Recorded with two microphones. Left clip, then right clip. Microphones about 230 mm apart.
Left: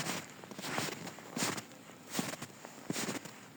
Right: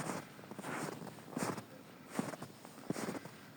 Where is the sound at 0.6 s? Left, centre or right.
Left.